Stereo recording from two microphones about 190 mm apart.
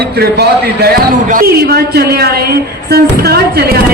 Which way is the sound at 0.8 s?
50° right (ahead or behind).